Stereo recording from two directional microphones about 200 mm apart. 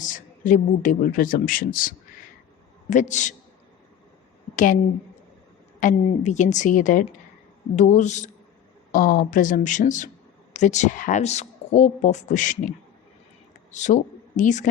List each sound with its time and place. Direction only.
0.0 s speech: 40° left (ahead or behind)
2.9 s speech: 35° left (ahead or behind)
4.5 s speech: 40° left (ahead or behind)
5.8 s speech: 35° left (ahead or behind)